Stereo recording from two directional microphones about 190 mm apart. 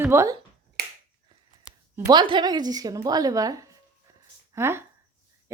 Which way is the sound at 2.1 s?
25° right (ahead or behind).